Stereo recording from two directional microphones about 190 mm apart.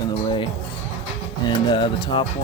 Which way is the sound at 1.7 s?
25° left (ahead or behind).